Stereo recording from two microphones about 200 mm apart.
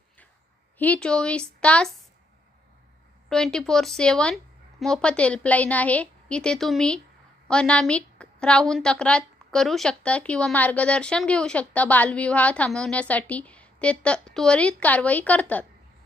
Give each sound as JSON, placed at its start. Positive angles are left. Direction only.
{"t": 0.8, "sound": "a woman's voice", "side_deg": 5}
{"t": 3.2, "sound": "a woman's voice", "side_deg": 5}